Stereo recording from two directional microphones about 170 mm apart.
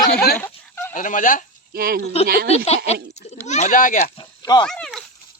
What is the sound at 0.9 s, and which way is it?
Speech, 50° left (ahead or behind).